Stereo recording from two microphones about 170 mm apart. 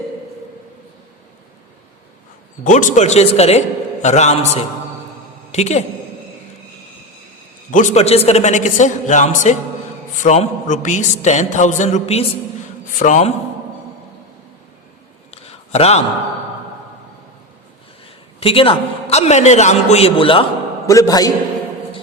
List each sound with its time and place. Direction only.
2.6 s a man's voice: 45° left (ahead or behind)
7.7 s a man's voice: 45° left (ahead or behind)
15.3 s a sound: 35° left (ahead or behind)
18.3 s a man's voice: 35° left (ahead or behind)
20.8 s a man's voice: 20° left (ahead or behind)